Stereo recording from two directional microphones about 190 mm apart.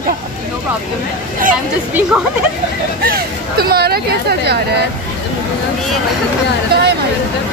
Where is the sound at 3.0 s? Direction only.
50° right (ahead or behind).